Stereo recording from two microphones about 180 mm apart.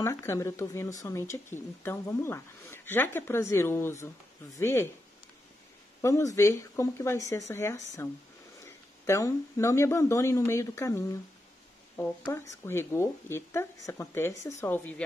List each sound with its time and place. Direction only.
0.0 s speech: 15° left (ahead or behind)
6.0 s speech: 15° left (ahead or behind)